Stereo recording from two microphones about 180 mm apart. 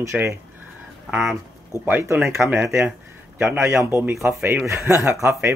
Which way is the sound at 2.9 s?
5° right (ahead or behind).